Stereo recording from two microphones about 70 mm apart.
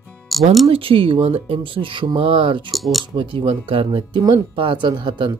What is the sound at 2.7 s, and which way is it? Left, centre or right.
Speech, centre.